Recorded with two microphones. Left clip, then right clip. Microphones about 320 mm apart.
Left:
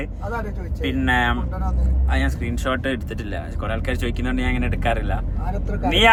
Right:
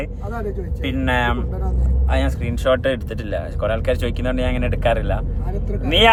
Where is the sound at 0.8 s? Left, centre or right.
Centre.